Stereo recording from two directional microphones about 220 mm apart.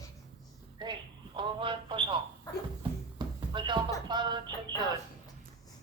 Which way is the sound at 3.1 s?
20° right (ahead or behind).